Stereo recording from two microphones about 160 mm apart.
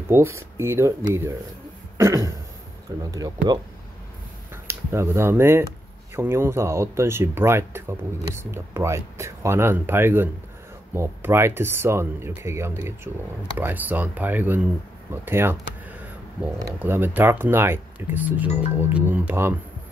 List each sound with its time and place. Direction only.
0.1 s speech: 15° right (ahead or behind)
2.0 s throat clearing: 20° right (ahead or behind)
3.1 s speech: 25° right (ahead or behind)
4.6 s speech: 15° right (ahead or behind)
16.5 s speech: 15° right (ahead or behind)